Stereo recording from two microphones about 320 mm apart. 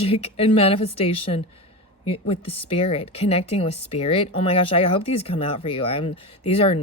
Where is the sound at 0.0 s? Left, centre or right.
Centre.